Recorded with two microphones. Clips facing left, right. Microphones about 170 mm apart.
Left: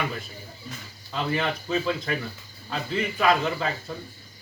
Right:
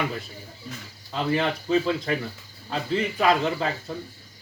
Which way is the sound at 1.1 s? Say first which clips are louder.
Right 2 dB; 25° right (ahead or behind).